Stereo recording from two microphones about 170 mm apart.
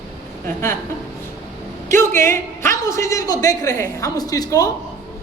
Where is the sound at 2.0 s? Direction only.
15° left (ahead or behind).